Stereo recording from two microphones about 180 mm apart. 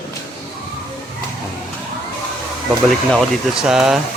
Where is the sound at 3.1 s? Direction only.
Centre (ahead or behind).